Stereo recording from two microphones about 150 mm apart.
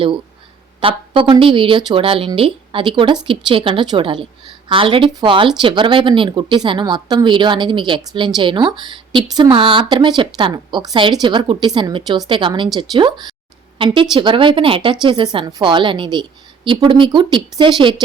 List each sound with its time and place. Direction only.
0.8 s speech: 35° right (ahead or behind)